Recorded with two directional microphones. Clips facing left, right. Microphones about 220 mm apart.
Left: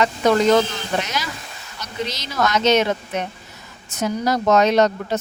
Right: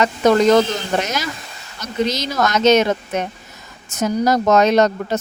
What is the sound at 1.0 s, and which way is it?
Speech, 45° right (ahead or behind).